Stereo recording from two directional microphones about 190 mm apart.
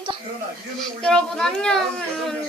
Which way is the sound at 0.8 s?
5° left (ahead or behind).